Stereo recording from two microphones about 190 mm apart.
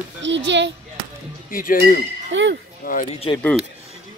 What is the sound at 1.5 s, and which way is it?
Speech, 50° left (ahead or behind).